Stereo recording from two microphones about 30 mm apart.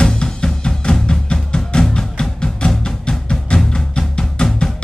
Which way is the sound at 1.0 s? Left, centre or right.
Left.